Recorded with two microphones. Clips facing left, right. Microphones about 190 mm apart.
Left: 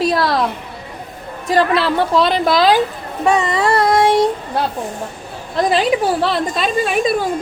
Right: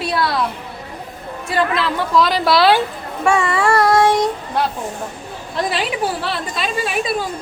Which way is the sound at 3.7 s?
20° left (ahead or behind).